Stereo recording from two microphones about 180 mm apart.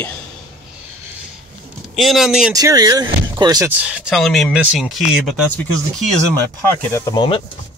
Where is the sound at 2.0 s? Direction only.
Centre (ahead or behind).